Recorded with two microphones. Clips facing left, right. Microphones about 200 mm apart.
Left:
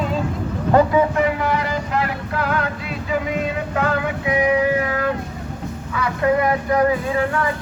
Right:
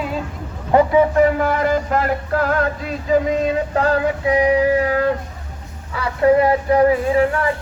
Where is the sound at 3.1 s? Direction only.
40° right (ahead or behind).